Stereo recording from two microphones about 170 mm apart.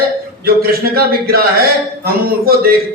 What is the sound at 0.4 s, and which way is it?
Speech, 60° right (ahead or behind).